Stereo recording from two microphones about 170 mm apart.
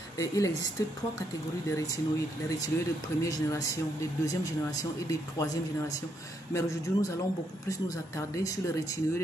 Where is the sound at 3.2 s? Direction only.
20° left (ahead or behind).